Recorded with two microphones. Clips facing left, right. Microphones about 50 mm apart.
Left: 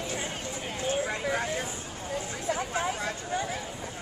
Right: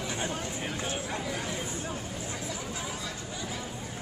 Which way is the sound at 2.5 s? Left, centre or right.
Left.